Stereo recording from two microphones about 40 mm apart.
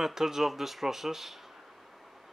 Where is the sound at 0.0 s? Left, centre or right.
Centre.